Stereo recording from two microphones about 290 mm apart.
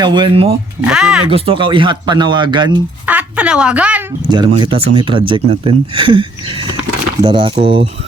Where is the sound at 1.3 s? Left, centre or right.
Centre.